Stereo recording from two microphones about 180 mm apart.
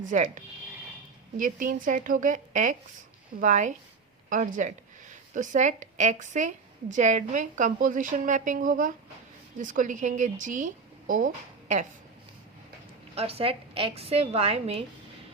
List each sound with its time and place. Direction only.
0.1 s a woman's voice: 45° right (ahead or behind)
13.1 s a woman's voice: 35° right (ahead or behind)